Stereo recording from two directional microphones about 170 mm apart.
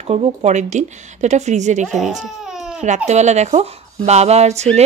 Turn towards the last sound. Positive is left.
turn(degrees=-40)  # may be behind; listen again after turning